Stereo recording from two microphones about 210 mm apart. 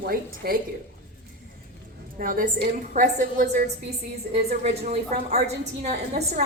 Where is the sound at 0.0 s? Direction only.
45° right (ahead or behind).